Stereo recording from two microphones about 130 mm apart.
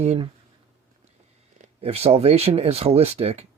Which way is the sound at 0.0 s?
55° right (ahead or behind).